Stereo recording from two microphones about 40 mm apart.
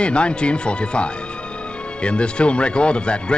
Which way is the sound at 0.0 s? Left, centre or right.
Left.